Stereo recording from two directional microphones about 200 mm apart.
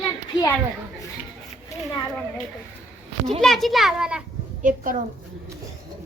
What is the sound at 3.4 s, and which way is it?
Speech, centre (ahead or behind).